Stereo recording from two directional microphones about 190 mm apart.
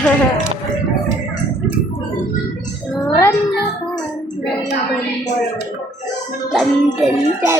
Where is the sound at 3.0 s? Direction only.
15° left (ahead or behind).